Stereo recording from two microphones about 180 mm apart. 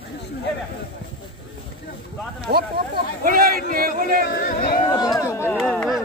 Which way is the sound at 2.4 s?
60° right (ahead or behind).